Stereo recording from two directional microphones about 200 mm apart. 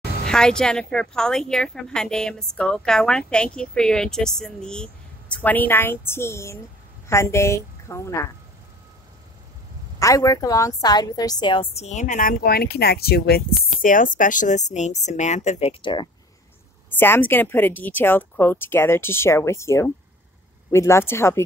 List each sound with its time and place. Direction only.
0.3 s a woman's voice: 5° left (ahead or behind)
9.9 s a woman's voice: 15° left (ahead or behind); by 15.7 s 35° left (ahead or behind)
15.8 s speech: 25° left (ahead or behind)
17.0 s speech: 10° left (ahead or behind)